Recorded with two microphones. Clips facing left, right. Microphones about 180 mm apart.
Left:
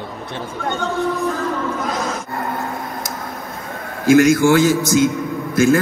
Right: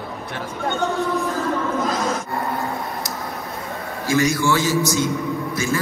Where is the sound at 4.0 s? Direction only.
55° left (ahead or behind).